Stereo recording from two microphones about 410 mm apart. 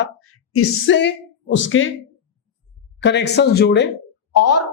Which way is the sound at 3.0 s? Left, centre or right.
Left.